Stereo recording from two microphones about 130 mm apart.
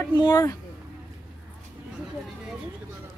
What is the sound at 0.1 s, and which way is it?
Speech, 30° left (ahead or behind).